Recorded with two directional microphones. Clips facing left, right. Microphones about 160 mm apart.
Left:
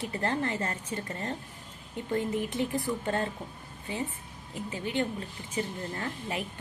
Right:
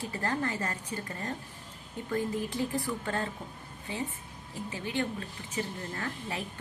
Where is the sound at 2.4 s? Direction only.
20° left (ahead or behind).